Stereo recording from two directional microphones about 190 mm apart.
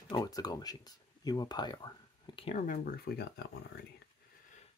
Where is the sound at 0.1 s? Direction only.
20° left (ahead or behind); by 3.3 s 50° left (ahead or behind).